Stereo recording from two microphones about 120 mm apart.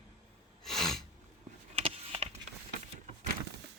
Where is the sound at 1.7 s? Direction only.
55° right (ahead or behind).